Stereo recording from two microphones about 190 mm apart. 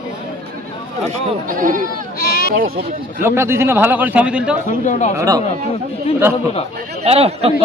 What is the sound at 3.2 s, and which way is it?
A man's voice, 15° right (ahead or behind).